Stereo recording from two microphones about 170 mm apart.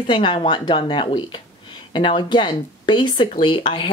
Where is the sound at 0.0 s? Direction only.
30° left (ahead or behind).